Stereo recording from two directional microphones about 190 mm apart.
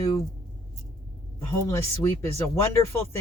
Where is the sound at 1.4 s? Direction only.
15° left (ahead or behind).